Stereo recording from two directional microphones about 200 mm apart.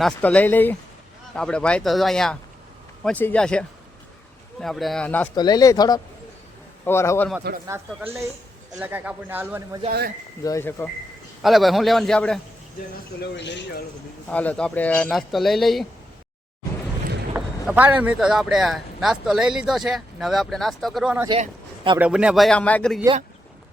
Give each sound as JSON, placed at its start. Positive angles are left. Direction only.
{"t": 0.0, "sound": "speech", "side_deg": 5}
{"t": 5.3, "sound": "speech", "side_deg": 20}
{"t": 7.7, "sound": "speech", "side_deg": -15}
{"t": 10.4, "sound": "speech", "side_deg": 15}
{"t": 11.4, "sound": "speech", "side_deg": 0}
{"t": 13.3, "sound": "speech", "side_deg": 60}
{"t": 14.3, "sound": "speech", "side_deg": 5}
{"t": 17.3, "sound": "speech", "side_deg": -10}